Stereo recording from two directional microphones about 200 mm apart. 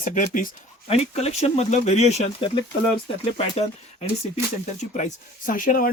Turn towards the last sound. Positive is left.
turn(degrees=45)  # may be behind; listen again after turning